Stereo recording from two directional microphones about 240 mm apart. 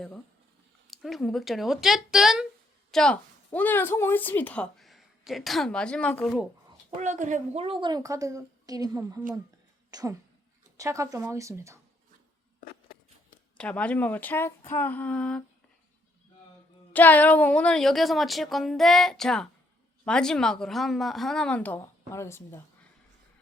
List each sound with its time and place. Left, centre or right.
0.9 s a woman's voice: centre
7.0 s a woman's voice: right; by 11.8 s centre
13.6 s speech: centre
16.9 s a woman's voice: centre